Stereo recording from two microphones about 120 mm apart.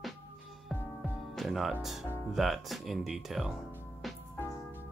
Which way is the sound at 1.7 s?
Centre (ahead or behind).